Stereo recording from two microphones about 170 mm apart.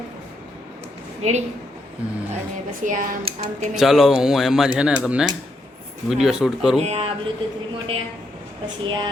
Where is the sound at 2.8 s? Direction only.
50° right (ahead or behind).